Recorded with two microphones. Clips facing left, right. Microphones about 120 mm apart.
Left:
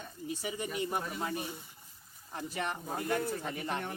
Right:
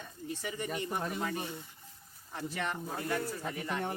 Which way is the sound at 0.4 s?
15° left (ahead or behind).